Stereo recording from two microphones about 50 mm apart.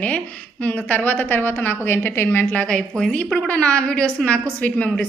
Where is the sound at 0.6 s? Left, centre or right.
Left.